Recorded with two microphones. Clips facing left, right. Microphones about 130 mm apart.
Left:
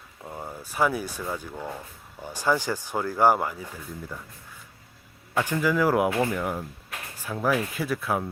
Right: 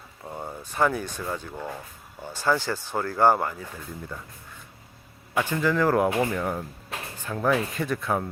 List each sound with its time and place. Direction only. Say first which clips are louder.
0.3 s a sound: right 1 dB; centre (ahead or behind)
1.2 s speech: even; 5° left (ahead or behind)
5.4 s speech: even; 10° left (ahead or behind)
6.1 s speech: even; 15° right (ahead or behind)
6.3 s speech: right 1 dB; 5° left (ahead or behind)